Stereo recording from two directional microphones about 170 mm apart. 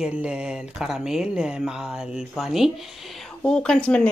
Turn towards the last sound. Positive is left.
turn(degrees=5)  # may be behind; listen again after turning